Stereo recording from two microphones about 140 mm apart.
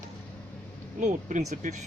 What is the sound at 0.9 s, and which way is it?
Speech, 60° right (ahead or behind).